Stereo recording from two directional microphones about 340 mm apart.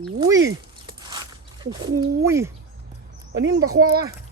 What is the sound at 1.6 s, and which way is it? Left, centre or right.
Speech, centre.